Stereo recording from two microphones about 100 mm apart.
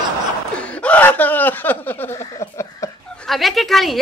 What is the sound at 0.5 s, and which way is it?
Speech, 10° left (ahead or behind).